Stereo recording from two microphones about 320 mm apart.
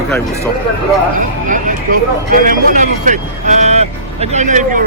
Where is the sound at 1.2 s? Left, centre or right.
Right.